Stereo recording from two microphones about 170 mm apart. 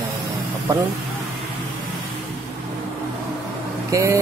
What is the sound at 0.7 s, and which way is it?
Music, 15° right (ahead or behind).